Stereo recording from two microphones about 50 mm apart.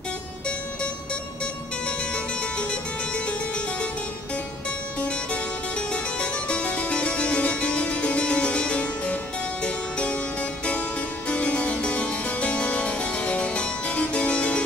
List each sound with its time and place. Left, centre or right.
5.0 s harpsichord: left
11.2 s harpsichord: left